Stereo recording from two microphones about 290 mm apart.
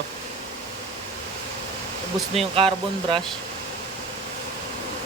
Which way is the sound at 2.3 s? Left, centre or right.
Centre.